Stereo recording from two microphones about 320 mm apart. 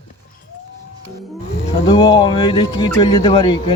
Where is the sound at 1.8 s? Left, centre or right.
Centre.